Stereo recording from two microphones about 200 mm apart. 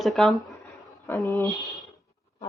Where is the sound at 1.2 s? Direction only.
20° right (ahead or behind).